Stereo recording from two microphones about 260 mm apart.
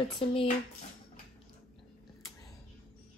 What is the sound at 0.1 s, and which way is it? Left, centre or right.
Speech, centre.